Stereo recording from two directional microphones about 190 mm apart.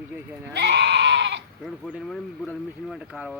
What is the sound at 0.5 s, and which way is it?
Goat, 60° right (ahead or behind).